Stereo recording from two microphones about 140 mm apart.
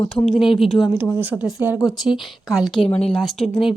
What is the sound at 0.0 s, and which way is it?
Speech, 5° left (ahead or behind).